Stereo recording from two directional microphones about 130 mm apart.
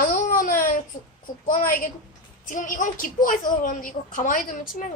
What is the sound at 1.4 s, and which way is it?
A woman's voice, 90° left.